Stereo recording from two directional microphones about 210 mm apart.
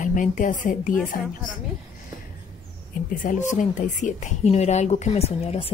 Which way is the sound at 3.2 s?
40° left (ahead or behind).